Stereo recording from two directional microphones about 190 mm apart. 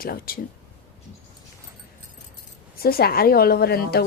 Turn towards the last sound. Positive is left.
turn(degrees=55)  # may be behind; listen again after turning